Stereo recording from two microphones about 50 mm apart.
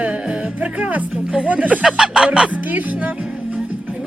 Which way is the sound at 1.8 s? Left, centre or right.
Centre.